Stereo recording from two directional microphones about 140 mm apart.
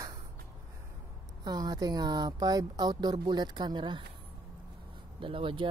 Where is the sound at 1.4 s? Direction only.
30° right (ahead or behind).